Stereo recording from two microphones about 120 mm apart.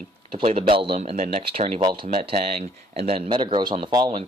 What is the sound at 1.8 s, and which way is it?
Speech, 40° right (ahead or behind).